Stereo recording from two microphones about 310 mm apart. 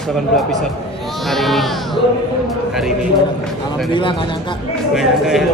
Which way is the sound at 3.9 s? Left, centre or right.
Centre.